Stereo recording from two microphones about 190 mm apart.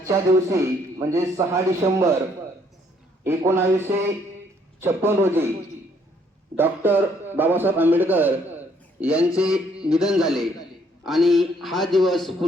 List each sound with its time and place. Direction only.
0.0 s a man's voice: 15° right (ahead or behind)
3.2 s a man's voice: 15° right (ahead or behind)
6.6 s a man's voice: 10° right (ahead or behind)